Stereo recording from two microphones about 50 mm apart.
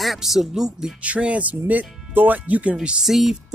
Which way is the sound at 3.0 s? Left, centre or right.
Centre.